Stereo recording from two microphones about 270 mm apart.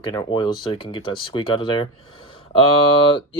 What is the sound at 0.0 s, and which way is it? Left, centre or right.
Speech, centre.